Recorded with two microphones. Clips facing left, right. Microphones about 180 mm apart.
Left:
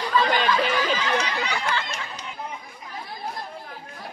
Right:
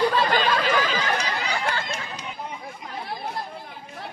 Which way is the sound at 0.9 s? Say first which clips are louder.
Left 1 dB; 45° right (ahead or behind).